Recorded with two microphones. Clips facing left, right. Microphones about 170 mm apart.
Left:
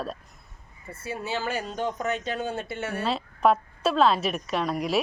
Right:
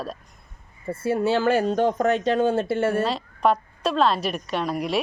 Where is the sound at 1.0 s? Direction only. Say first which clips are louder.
Right 10 dB; 55° right (ahead or behind).